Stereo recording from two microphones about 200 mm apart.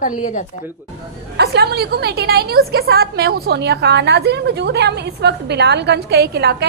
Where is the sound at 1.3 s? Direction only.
55° right (ahead or behind).